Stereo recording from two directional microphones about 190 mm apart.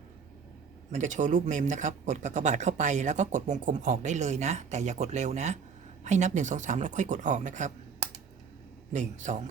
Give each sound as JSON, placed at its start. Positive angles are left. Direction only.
{"t": 0.9, "sound": "speech", "side_deg": -40}
{"t": 8.9, "sound": "speech", "side_deg": -40}